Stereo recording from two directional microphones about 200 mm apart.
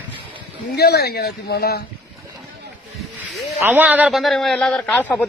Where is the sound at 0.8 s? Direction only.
50° left (ahead or behind).